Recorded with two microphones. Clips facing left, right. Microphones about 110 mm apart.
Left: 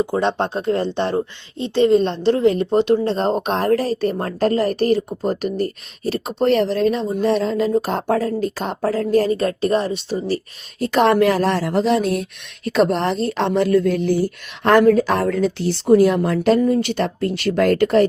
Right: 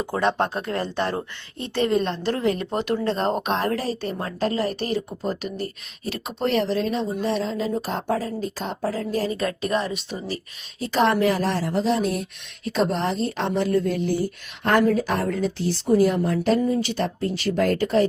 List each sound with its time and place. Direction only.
0.2 s speech: 25° left (ahead or behind); by 9.3 s 65° left (ahead or behind)
9.4 s speech: 35° left (ahead or behind); by 12.2 s 70° left (ahead or behind)
12.6 s speech: 80° left; by 18.0 s 65° left (ahead or behind)